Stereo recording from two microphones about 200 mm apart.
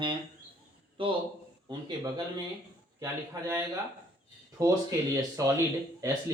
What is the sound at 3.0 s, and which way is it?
Speech, 15° right (ahead or behind).